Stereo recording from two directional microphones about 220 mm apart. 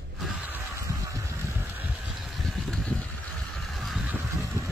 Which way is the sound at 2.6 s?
Centre (ahead or behind).